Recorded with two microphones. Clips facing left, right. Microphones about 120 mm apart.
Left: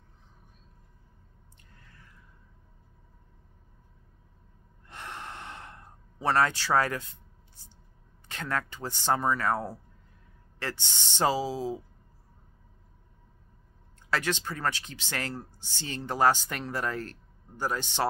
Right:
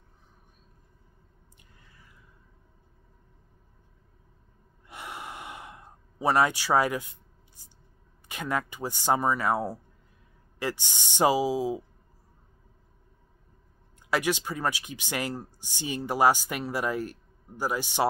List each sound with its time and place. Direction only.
1.8 s a sound: 10° right (ahead or behind)
4.8 s gasp: 10° right (ahead or behind)
8.3 s speech: 15° right (ahead or behind)
14.1 s speech: 15° right (ahead or behind)